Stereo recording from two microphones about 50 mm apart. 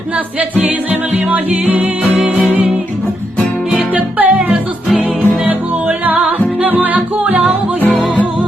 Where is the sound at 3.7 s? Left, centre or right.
Right.